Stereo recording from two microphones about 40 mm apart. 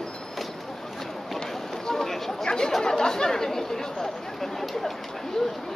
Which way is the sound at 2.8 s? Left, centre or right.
Centre.